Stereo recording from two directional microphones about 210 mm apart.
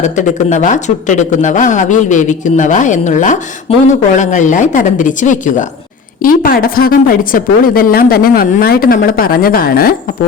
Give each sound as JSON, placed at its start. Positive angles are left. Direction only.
{"t": 0.0, "sound": "a woman's voice", "side_deg": 35}